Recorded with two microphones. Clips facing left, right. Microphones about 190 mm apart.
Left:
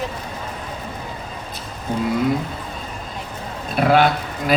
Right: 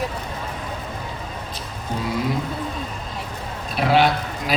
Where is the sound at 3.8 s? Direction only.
50° left (ahead or behind).